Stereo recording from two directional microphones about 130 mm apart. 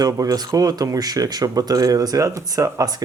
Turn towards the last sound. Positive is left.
turn(degrees=-30)  # may be behind; listen again after turning